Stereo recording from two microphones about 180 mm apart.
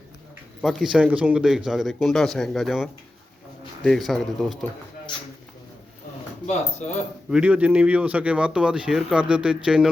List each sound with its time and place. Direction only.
0.6 s speech: centre (ahead or behind)
6.5 s speech: 40° left (ahead or behind)
7.3 s speech: 5° right (ahead or behind)